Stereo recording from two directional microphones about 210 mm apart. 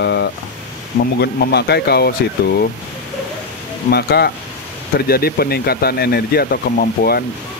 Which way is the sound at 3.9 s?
50° left (ahead or behind).